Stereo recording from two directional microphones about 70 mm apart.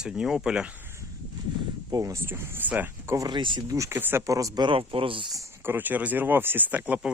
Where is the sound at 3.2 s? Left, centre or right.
Right.